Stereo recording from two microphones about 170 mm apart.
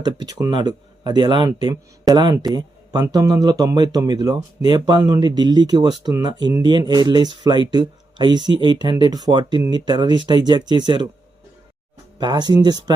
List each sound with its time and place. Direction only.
0.0 s speech: 25° right (ahead or behind)
12.2 s speech: 25° right (ahead or behind)